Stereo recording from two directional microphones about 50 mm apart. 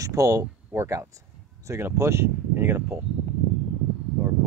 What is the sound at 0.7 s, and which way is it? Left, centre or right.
Speech, right.